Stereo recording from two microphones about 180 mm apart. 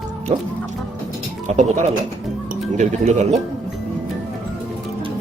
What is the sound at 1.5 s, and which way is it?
Speech, 40° right (ahead or behind).